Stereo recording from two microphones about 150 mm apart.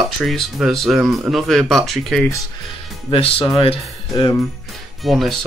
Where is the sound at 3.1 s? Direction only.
40° left (ahead or behind).